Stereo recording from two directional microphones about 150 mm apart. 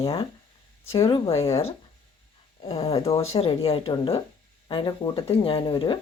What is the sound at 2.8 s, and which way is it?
Speech, 40° left (ahead or behind).